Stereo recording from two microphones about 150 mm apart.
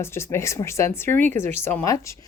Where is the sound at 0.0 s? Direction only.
15° left (ahead or behind).